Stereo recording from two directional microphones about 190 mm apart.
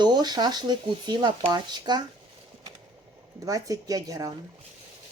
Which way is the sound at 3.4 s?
20° right (ahead or behind).